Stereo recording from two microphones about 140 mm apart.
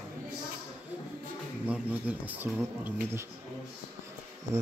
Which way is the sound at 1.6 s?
10° right (ahead or behind).